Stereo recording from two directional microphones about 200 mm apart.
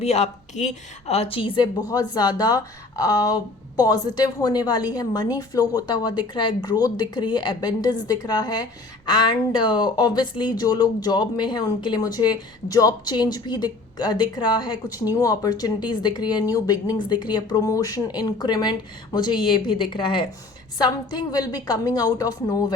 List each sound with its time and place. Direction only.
0.0 s speech: 35° left (ahead or behind); by 22.6 s 15° left (ahead or behind)